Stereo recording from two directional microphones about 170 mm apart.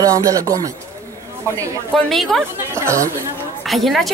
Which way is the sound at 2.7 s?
15° right (ahead or behind).